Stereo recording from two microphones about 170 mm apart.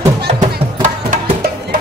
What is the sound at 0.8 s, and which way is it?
Music, 50° right (ahead or behind).